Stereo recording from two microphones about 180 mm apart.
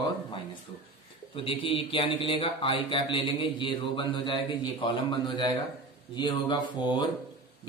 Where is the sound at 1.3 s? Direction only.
30° left (ahead or behind).